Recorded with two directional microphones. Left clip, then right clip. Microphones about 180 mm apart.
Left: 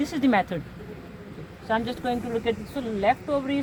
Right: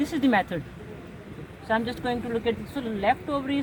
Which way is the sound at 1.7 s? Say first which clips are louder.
Even; 30° left (ahead or behind).